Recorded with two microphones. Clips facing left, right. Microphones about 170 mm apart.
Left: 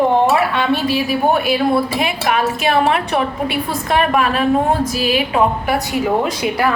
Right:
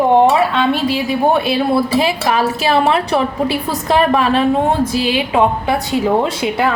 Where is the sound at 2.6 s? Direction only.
35° right (ahead or behind).